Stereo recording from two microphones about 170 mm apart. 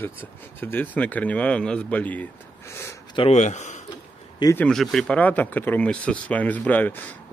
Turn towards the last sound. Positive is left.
turn(degrees=10)  # may be behind; listen again after turning